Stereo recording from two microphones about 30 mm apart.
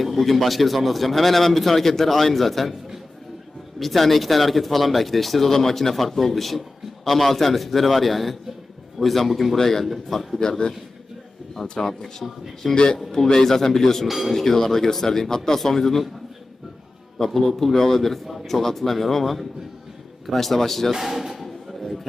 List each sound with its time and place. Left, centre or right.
0.0 s speech: centre
3.8 s speech: centre
9.6 s speech: centre
9.8 s speech: centre
11.8 s a man's voice: left
14.1 s speech: centre
14.3 s speech: centre
17.2 s speech: centre
20.9 s speech: centre
21.3 s a sound: centre